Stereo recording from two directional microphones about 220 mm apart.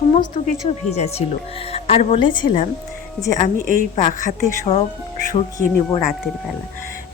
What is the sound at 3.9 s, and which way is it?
Speech, 35° left (ahead or behind).